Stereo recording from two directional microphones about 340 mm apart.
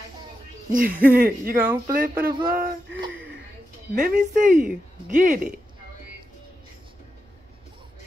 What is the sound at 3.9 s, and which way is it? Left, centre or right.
Speech, right.